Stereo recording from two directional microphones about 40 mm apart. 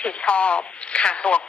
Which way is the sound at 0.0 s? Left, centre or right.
Left.